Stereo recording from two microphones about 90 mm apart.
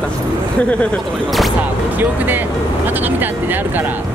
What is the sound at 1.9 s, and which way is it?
Speech, 20° right (ahead or behind).